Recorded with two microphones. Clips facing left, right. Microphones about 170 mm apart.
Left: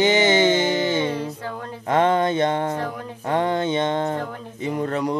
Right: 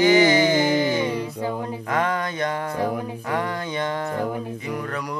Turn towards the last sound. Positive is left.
turn(degrees=25)  # may be behind; listen again after turning